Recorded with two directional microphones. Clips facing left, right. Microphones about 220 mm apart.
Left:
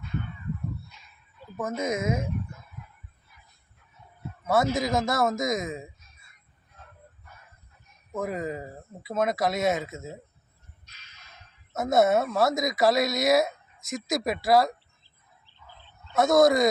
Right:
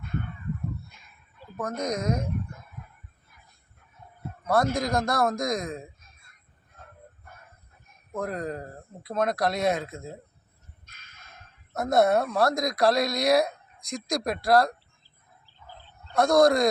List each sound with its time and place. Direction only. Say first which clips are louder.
1.5 s speech: left 1 dB; 5° left (ahead or behind)
4.4 s speech: even; 5° left (ahead or behind)
6.8 s vehicle: right 2 dB; 50° right (ahead or behind)
8.1 s speech: left 1 dB; 5° left (ahead or behind)
10.8 s a sound: right 3 dB; 50° right (ahead or behind)
11.7 s speech: even; centre (ahead or behind)
16.1 s speech: even; centre (ahead or behind)